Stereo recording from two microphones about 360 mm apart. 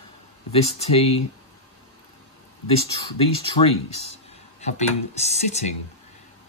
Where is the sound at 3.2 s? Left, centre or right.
Centre.